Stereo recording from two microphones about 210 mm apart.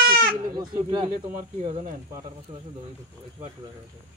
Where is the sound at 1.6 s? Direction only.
35° right (ahead or behind).